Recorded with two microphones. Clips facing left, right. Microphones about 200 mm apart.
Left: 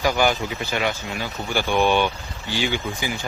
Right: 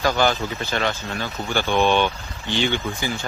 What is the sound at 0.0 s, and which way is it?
Speech, 10° left (ahead or behind).